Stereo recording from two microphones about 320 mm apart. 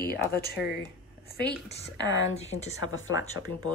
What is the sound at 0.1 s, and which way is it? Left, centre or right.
Speech, left.